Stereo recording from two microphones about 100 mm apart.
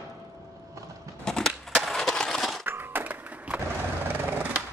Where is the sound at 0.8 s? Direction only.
30° right (ahead or behind).